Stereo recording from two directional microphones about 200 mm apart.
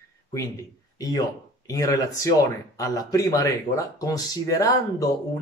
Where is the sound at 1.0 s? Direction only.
20° left (ahead or behind).